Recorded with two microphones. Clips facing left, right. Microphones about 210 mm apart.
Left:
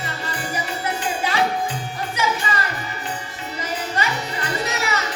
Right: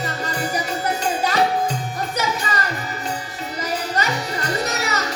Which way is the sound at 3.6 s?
40° right (ahead or behind).